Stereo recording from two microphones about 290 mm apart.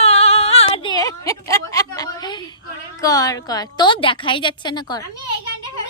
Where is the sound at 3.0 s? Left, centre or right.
Centre.